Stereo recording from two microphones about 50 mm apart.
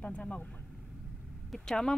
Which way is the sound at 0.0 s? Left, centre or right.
Left.